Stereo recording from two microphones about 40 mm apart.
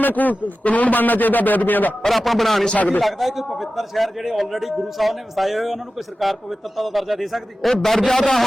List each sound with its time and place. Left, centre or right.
0.0 s a man's voice: left
2.0 s a man's voice: centre
2.7 s a man's voice: left
3.0 s a man's voice: centre